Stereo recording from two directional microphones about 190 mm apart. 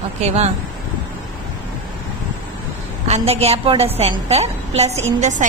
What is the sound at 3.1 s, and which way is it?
A woman's voice, 35° right (ahead or behind).